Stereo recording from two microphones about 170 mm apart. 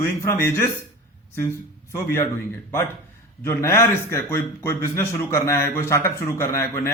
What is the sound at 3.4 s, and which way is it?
A man's voice, 15° left (ahead or behind).